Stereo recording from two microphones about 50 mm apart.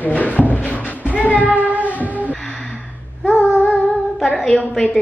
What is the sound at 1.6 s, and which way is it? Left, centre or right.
Music, right.